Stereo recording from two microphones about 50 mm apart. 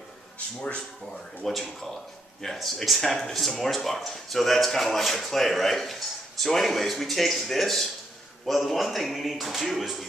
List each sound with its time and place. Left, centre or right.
0.6 s speech: centre
1.4 s speech: centre